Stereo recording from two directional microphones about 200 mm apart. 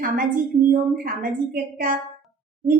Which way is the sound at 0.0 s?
45° right (ahead or behind).